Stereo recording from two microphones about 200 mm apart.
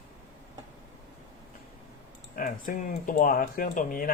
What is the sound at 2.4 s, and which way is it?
Speech, 45° left (ahead or behind).